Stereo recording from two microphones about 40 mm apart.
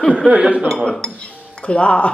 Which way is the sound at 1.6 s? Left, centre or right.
Left.